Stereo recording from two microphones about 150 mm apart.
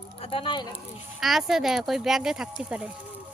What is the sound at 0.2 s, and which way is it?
Speech, 40° left (ahead or behind).